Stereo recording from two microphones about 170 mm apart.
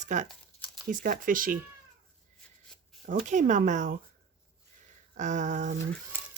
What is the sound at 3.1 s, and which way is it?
Speech, 50° right (ahead or behind).